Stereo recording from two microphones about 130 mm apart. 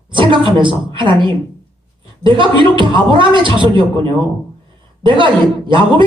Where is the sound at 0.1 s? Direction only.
40° right (ahead or behind).